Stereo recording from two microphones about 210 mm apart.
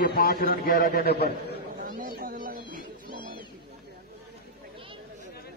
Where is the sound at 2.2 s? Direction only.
45° right (ahead or behind).